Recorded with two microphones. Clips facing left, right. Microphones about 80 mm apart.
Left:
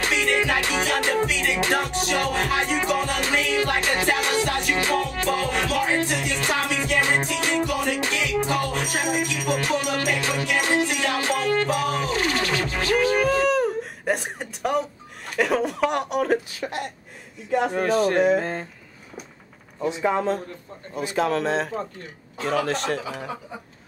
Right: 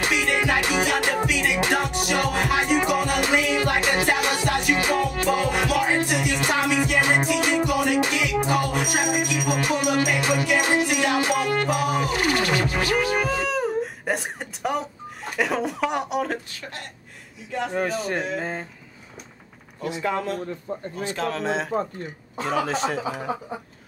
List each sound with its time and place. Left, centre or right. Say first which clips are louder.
0.0 s music: even; centre
15.3 s speech: left 2 dB; centre
16.6 s speech: left 7 dB; left
17.6 s speech: left 3 dB; centre
20.0 s speech: left 3 dB; centre
21.3 s speech: left 2 dB; centre